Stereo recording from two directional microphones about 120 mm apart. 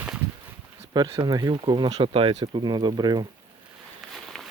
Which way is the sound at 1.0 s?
35° right (ahead or behind).